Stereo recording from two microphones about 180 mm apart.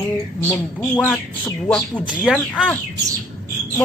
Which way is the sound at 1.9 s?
5° right (ahead or behind).